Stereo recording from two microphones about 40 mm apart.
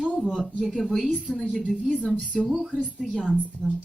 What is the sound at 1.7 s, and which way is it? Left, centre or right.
A woman's voice, centre.